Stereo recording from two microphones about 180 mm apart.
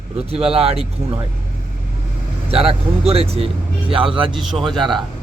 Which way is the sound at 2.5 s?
35° right (ahead or behind).